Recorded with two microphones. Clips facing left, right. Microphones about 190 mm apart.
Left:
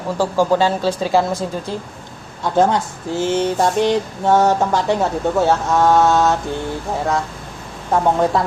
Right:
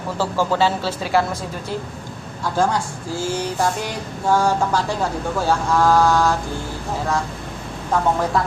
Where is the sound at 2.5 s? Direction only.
20° left (ahead or behind).